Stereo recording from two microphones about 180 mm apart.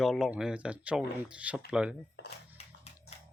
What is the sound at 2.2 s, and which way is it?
Music, 70° left (ahead or behind).